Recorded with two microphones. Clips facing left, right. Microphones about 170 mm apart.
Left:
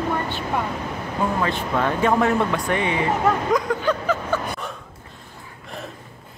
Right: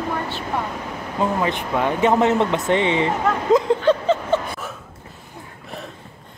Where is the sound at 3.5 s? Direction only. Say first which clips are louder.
Right 5 dB; 25° right (ahead or behind).